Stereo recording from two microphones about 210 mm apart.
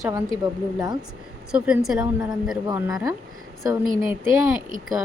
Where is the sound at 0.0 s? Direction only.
15° right (ahead or behind).